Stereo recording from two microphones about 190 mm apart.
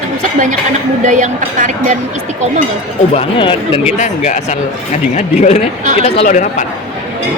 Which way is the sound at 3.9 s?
40° left (ahead or behind).